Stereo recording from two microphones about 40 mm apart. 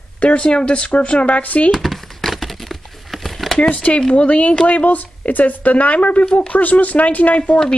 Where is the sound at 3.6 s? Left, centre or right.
Left.